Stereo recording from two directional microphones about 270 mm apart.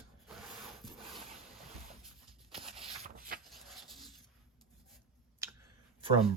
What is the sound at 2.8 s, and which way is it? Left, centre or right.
Shuffle, right.